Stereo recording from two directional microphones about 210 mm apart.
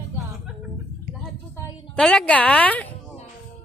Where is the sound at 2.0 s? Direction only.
5° left (ahead or behind).